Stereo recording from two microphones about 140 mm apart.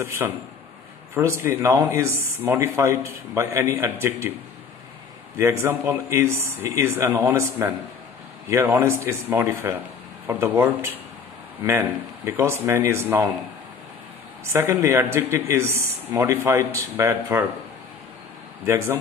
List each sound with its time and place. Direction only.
0.2 s speech: 15° right (ahead or behind)
5.4 s speech: 20° right (ahead or behind)
14.4 s speech: 20° right (ahead or behind)